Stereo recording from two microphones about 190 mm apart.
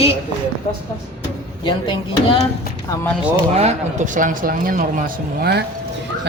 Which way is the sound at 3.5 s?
35° right (ahead or behind).